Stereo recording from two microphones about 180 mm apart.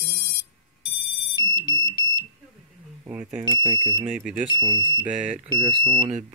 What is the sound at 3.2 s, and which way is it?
Speech, 45° right (ahead or behind).